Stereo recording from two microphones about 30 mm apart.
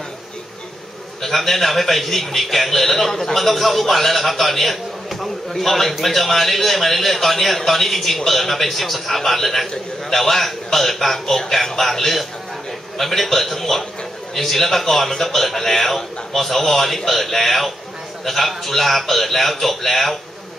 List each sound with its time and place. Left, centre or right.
1.2 s a man's voice: centre